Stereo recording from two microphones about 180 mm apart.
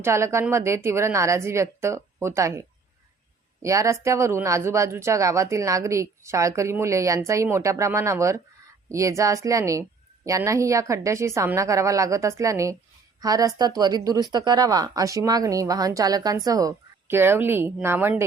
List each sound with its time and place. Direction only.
0.0 s speech: 15° right (ahead or behind)